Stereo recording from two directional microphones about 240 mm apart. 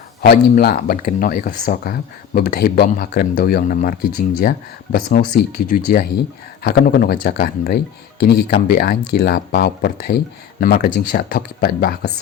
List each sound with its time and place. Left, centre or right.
0.2 s speech: left